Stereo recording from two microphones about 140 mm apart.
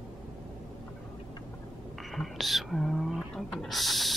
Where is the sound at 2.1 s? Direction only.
Centre (ahead or behind).